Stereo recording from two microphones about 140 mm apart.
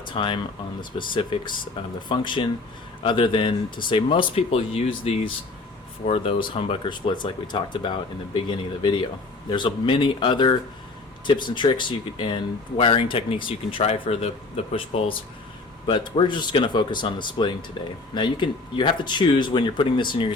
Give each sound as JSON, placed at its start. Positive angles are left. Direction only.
{"t": 0.1, "sound": "speech", "side_deg": 35}